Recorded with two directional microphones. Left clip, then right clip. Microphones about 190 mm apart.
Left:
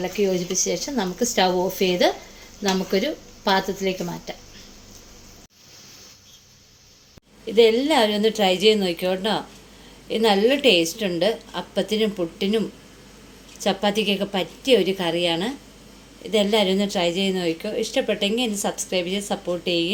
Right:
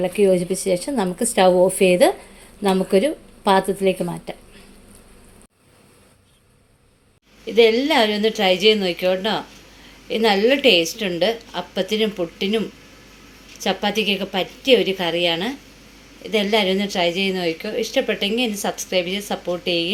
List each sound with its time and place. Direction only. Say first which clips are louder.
0.0 s speech: right 6 dB; 35° right (ahead or behind)
7.4 s a woman's voice: right 2 dB; centre (ahead or behind)